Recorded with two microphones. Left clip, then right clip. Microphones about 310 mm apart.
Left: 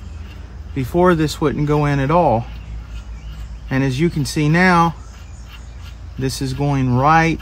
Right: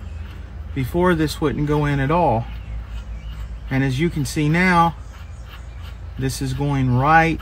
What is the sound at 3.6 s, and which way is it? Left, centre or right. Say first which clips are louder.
Speech: left 3 dB; left.